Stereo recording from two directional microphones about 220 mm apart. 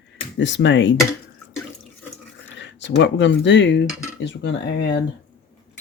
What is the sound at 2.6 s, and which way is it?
Speech, 55° left (ahead or behind).